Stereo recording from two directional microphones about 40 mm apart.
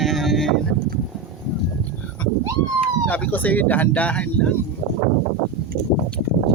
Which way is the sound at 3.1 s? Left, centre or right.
Left.